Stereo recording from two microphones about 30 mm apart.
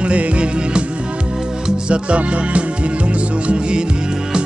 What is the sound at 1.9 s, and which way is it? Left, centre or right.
Music, right.